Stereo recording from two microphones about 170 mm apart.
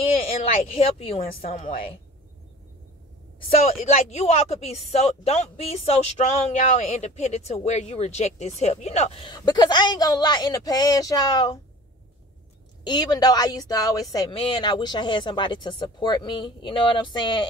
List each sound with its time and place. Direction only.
0.7 s speech: 35° left (ahead or behind)
1.2 s a woman's voice: 55° left (ahead or behind)
1.5 s speech: 35° left (ahead or behind)
3.8 s speech: 40° left (ahead or behind)
9.3 s speech: 25° left (ahead or behind)
12.8 s speech: 25° left (ahead or behind)